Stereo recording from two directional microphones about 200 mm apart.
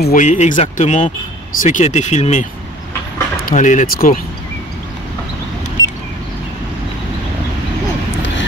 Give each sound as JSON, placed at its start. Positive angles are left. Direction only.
{"t": 0.0, "sound": "speech", "side_deg": 40}
{"t": 3.4, "sound": "speech", "side_deg": 40}